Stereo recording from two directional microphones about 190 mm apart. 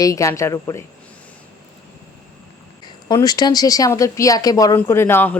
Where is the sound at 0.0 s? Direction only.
15° left (ahead or behind).